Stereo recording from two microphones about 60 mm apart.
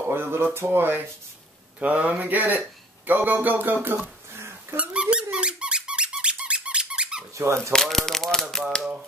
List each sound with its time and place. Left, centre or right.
0.1 s speech: right
1.8 s speech: right
4.7 s squeak: centre
7.3 s speech: right
7.7 s speech: centre